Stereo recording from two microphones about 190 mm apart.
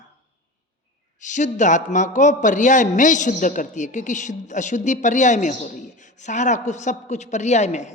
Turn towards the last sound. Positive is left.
turn(degrees=35)  # may be behind; listen again after turning